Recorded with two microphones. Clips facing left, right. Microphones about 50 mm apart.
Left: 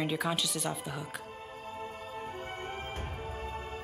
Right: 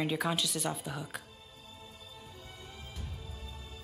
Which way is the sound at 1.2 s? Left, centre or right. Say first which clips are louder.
Left 10 dB; left.